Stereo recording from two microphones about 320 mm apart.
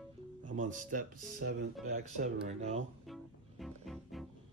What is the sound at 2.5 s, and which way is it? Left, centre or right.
Speech, right.